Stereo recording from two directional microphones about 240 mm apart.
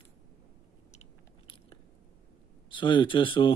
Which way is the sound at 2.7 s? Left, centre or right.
Centre.